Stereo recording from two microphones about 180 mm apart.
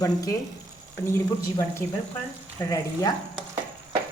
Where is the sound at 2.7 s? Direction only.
20° left (ahead or behind).